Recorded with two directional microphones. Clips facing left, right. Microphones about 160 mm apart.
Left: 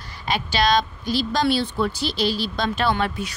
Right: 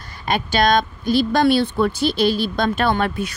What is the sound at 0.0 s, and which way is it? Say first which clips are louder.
A woman's voice: right 3 dB; 50° right (ahead or behind).